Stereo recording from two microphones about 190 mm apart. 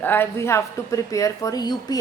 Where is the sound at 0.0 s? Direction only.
10° left (ahead or behind).